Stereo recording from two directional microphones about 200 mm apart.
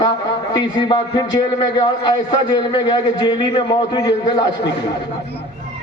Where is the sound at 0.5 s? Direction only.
20° left (ahead or behind).